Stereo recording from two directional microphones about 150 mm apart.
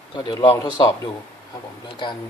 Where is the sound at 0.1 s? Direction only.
30° left (ahead or behind).